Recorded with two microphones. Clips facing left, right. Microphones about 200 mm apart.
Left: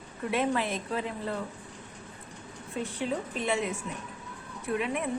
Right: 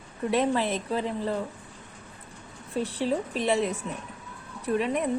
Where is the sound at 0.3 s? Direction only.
35° right (ahead or behind).